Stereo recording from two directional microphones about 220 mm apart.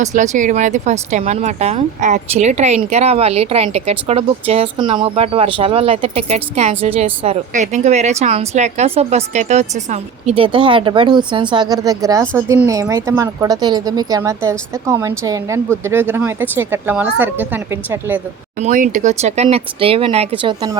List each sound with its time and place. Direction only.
0.0 s a woman's voice: 35° right (ahead or behind); by 18.2 s 10° right (ahead or behind)
18.6 s speech: 35° right (ahead or behind); by 20.7 s 20° right (ahead or behind)